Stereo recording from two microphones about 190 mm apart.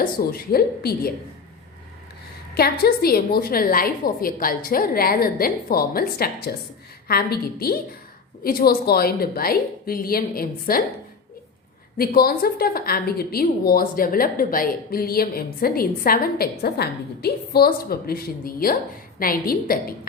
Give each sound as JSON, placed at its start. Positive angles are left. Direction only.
{"t": 0.0, "sound": "a woman's voice", "side_deg": 50}
{"t": 2.6, "sound": "a woman's voice", "side_deg": 55}
{"t": 11.9, "sound": "a woman's voice", "side_deg": 50}